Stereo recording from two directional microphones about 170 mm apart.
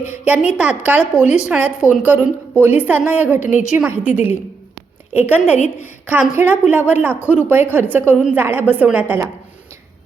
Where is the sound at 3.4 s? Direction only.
45° left (ahead or behind).